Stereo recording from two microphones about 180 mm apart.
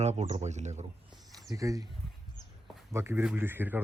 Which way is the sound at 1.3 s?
20° right (ahead or behind).